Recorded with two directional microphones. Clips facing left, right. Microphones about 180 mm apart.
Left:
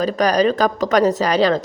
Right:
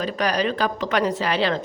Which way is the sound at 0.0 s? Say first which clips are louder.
Left 7 dB; 40° left (ahead or behind).